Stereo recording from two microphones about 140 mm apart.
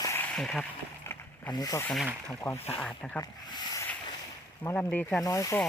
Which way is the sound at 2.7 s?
10° left (ahead or behind).